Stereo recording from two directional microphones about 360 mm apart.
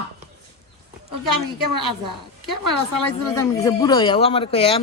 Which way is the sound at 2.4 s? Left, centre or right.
Right.